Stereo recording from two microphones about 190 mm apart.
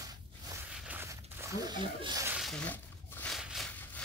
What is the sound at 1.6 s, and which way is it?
Speech, 20° right (ahead or behind).